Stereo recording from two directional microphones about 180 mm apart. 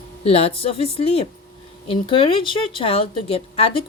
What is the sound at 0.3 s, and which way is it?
Speech, 30° left (ahead or behind).